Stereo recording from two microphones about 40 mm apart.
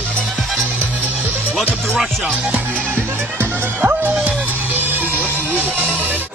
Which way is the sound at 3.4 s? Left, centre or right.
Right.